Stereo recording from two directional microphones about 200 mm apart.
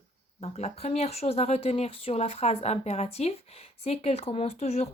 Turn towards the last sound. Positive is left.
turn(degrees=30)  # may be behind; listen again after turning